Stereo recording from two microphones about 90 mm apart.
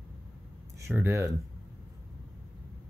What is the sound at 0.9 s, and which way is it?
Speech, 25° right (ahead or behind).